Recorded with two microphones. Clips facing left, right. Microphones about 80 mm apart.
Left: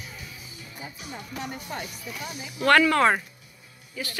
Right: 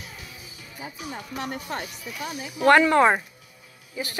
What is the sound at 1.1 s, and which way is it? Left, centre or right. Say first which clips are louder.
Speech: right 2 dB; right.